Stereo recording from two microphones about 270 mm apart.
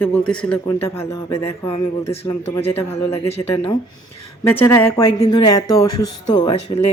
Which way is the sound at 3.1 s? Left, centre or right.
Left.